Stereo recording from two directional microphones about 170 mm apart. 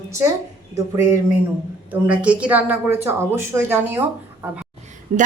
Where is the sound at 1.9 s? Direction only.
10° right (ahead or behind).